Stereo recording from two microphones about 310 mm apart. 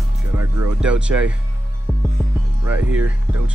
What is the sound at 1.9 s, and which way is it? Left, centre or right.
Music, centre.